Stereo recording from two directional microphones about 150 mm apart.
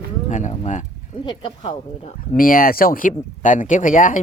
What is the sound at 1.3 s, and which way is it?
Speech, 30° left (ahead or behind).